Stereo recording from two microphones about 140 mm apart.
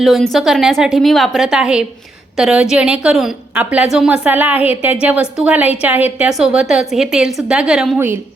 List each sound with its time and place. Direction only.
0.0 s a woman's voice: centre (ahead or behind)
7.9 s a woman's voice: 15° right (ahead or behind)